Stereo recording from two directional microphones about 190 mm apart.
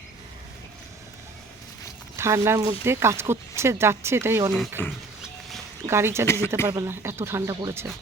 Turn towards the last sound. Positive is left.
turn(degrees=-15)  # may be behind; listen again after turning